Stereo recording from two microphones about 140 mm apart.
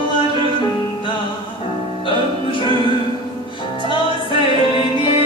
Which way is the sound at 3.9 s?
40° left (ahead or behind).